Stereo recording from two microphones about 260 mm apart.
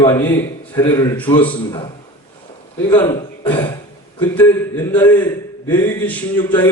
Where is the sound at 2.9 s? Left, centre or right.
Centre.